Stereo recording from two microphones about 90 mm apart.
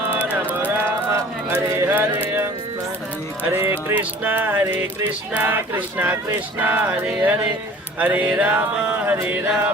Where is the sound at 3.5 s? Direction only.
25° right (ahead or behind).